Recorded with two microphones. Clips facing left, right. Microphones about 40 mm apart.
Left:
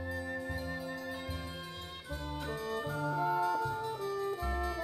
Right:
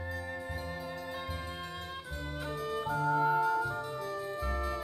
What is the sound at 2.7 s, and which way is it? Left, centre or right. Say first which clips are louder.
Music: right 6 dB; centre.